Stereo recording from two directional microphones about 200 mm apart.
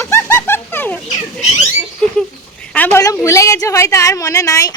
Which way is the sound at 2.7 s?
10° left (ahead or behind).